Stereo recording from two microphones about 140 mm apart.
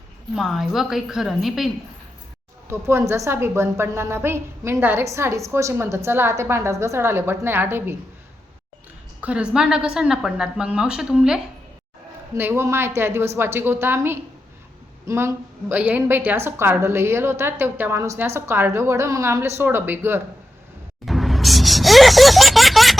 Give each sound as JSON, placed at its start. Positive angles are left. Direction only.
{"t": 0.3, "sound": "a woman's voice", "side_deg": 0}
{"t": 2.6, "sound": "a woman's voice", "side_deg": -20}
{"t": 9.2, "sound": "a woman's voice", "side_deg": -10}
{"t": 12.3, "sound": "a woman's voice", "side_deg": -15}
{"t": 21.0, "sound": "a sound", "side_deg": 0}